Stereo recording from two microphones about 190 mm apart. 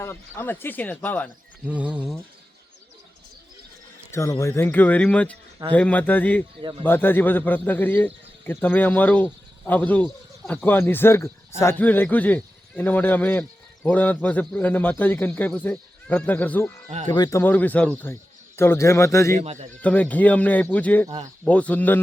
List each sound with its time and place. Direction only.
0.0 s speech: 10° left (ahead or behind)
1.6 s a sound: 5° right (ahead or behind)
4.1 s speech: 15° left (ahead or behind)
6.6 s speech: 25° right (ahead or behind)
6.8 s speech: 10° left (ahead or behind)
19.4 s speech: 35° right (ahead or behind)
19.8 s speech: 5° left (ahead or behind)